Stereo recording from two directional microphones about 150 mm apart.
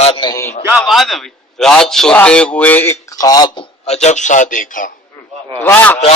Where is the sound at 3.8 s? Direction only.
45° left (ahead or behind).